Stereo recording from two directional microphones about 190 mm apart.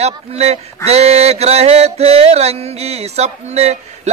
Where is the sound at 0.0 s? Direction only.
35° right (ahead or behind).